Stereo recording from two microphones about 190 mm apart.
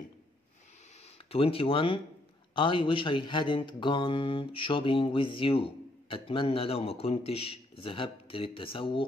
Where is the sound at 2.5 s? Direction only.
25° left (ahead or behind).